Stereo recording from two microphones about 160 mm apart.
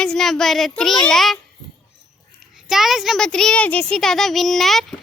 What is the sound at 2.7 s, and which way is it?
A child's voice, centre (ahead or behind).